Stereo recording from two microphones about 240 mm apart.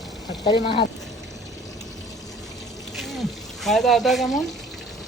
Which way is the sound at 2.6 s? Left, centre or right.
Centre.